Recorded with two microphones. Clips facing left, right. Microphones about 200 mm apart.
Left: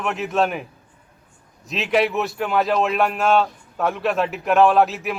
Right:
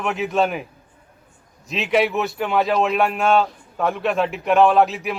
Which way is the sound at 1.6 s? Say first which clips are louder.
Right 1 dB; centre (ahead or behind).